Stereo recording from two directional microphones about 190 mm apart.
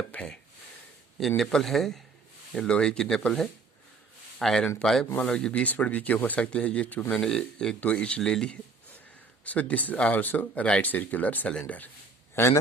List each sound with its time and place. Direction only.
0.1 s speech: 5° left (ahead or behind)
1.4 s speech: centre (ahead or behind)